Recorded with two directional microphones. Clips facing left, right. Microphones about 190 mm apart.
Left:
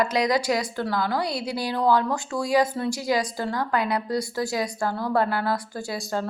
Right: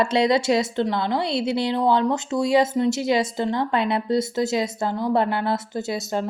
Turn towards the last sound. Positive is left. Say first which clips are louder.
# right 3 dB
turn(degrees=-20)  # may be behind; listen again after turning